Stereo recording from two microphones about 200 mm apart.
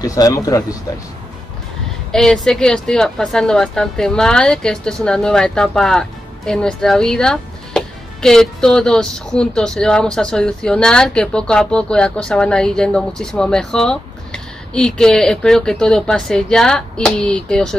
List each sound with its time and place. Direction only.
0.0 s speech: 15° left (ahead or behind)
2.1 s speech: centre (ahead or behind)